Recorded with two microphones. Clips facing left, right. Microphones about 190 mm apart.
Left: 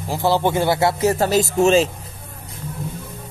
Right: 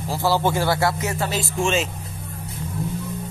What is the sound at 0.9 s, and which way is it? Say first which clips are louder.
Speech: left 8 dB; 35° left (ahead or behind).